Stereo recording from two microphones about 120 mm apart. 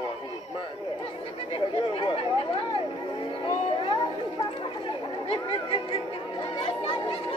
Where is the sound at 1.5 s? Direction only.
45° left (ahead or behind).